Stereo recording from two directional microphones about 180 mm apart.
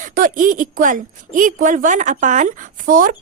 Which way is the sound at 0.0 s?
50° right (ahead or behind).